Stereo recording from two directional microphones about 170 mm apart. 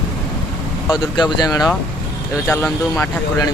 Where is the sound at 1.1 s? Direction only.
25° left (ahead or behind).